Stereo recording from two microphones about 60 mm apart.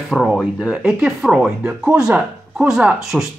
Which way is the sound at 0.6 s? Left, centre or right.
Centre.